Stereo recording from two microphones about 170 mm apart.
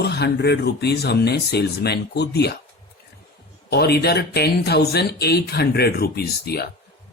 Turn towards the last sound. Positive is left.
turn(degrees=70)  # may be behind; listen again after turning